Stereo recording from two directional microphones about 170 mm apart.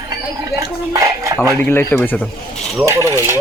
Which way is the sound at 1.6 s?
15° left (ahead or behind).